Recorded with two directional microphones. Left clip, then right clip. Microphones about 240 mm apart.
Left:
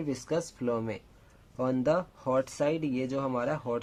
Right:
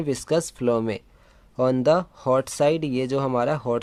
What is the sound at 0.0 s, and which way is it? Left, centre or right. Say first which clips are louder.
Speech: right 8 dB; right.